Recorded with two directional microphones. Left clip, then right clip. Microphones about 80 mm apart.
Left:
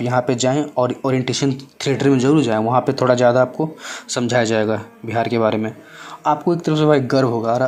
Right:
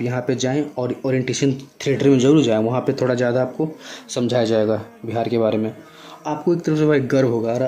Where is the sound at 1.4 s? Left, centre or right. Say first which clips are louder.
Even; centre.